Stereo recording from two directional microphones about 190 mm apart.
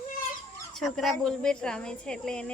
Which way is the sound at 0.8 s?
Centre (ahead or behind).